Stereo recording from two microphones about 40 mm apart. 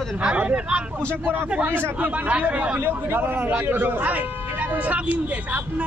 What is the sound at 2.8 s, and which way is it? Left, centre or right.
Speech, right.